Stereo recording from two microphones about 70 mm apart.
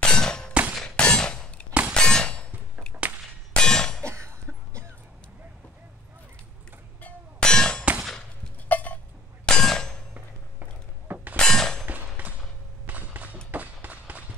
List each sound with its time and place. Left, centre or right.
0.0 s clang: centre
0.7 s hammer: centre
1.7 s clang: centre
2.0 s clang: centre
2.9 s whip: centre
3.5 s a sound: centre
7.0 s music: left
7.4 s clang: centre
8.6 s a sound: left
9.5 s clang: centre
10.1 s a sound: right
11.3 s clang: centre
12.8 s a sound: right
13.5 s run: right